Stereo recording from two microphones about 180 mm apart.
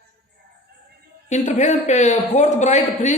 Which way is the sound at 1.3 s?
40° left (ahead or behind).